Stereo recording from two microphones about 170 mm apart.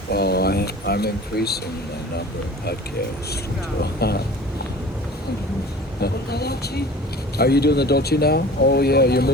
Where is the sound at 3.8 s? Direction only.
70° left (ahead or behind).